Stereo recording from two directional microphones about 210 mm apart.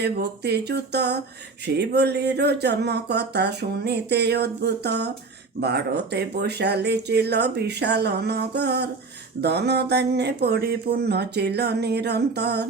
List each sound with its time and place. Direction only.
0.0 s speech: 50° right (ahead or behind)